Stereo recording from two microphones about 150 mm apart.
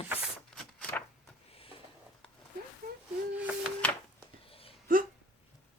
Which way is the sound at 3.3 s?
10° right (ahead or behind).